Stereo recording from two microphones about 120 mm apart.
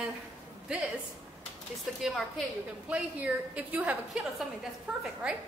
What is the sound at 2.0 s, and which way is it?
A woman's voice, centre (ahead or behind).